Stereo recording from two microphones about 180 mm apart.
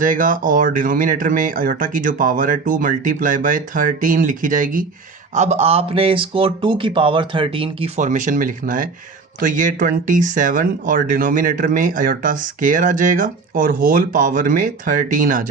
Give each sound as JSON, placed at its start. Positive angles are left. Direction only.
{"t": 0.0, "sound": "speech", "side_deg": -50}
{"t": 7.9, "sound": "speech", "side_deg": -45}